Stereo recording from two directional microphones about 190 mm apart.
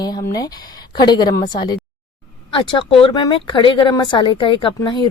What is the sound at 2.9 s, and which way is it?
Speech, 30° left (ahead or behind).